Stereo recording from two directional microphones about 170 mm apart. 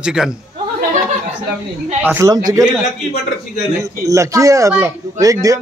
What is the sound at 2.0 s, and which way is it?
Speech, 15° right (ahead or behind).